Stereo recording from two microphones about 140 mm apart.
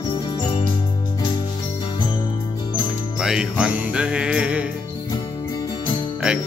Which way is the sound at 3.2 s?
5° right (ahead or behind).